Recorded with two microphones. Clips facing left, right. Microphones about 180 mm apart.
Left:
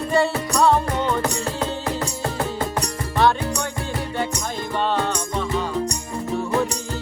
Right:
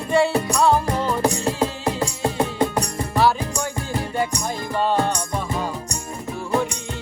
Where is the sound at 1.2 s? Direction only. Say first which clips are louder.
Right 3 dB; 30° right (ahead or behind).